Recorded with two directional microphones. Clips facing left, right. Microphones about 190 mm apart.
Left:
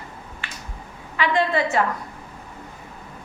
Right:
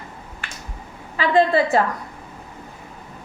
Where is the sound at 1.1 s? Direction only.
35° right (ahead or behind).